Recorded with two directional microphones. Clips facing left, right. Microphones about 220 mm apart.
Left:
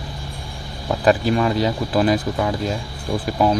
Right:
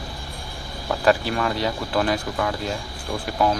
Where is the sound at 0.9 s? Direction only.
10° left (ahead or behind).